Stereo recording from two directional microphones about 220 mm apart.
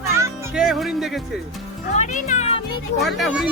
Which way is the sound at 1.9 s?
35° left (ahead or behind).